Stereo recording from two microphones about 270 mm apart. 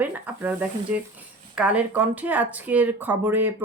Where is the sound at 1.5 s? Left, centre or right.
Centre.